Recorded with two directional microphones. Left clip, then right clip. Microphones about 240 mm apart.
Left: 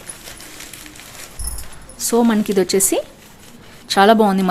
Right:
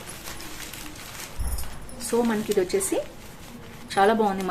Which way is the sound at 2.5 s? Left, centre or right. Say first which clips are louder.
Left 6 dB; left.